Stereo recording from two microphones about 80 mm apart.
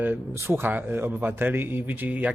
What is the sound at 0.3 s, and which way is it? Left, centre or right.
A man's voice, right.